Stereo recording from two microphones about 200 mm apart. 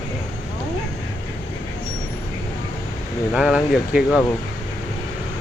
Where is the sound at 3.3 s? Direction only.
5° right (ahead or behind).